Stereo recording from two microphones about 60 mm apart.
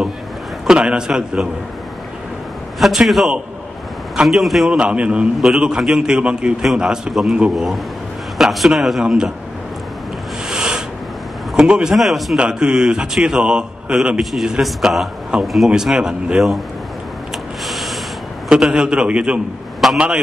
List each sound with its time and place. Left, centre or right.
0.7 s a man's voice: centre
2.8 s a man's voice: centre
4.6 s a man's voice: centre
9.0 s a man's voice: centre
10.5 s a sound: centre
11.5 s a man's voice: centre
12.4 s a man's voice: centre
15.7 s a man's voice: centre
17.6 s a sound: centre
18.5 s a man's voice: centre
19.8 s a man's voice: centre